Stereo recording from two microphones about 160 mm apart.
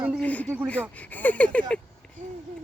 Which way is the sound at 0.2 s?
10° left (ahead or behind).